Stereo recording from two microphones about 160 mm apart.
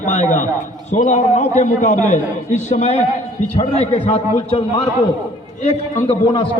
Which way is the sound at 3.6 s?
35° left (ahead or behind).